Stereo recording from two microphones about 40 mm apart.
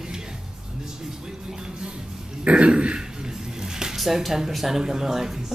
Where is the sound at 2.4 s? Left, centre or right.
Right.